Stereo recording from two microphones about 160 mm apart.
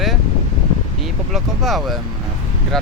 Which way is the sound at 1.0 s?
Centre (ahead or behind).